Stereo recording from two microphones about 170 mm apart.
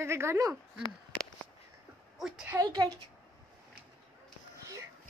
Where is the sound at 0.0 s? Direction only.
15° right (ahead or behind).